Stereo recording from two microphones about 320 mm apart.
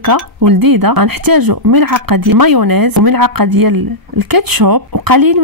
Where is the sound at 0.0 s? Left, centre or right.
Right.